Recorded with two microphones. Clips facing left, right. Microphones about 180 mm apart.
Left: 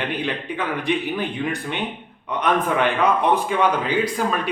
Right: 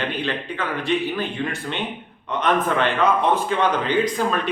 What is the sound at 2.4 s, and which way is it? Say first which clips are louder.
A man's voice: even; 15° left (ahead or behind).